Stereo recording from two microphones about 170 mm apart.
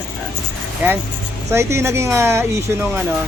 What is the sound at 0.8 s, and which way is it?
Speech, 10° right (ahead or behind).